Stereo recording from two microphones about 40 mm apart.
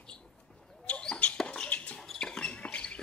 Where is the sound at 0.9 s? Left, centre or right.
Left.